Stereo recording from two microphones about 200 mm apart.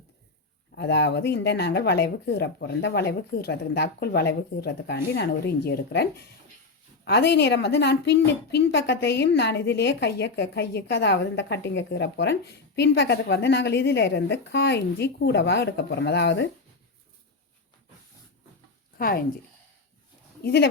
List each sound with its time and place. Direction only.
0.8 s a woman's voice: 60° left (ahead or behind)
18.9 s speech: 50° left (ahead or behind)
20.4 s speech: 55° left (ahead or behind)